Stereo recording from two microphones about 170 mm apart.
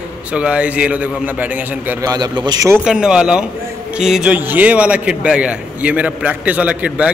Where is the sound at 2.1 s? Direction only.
25° right (ahead or behind).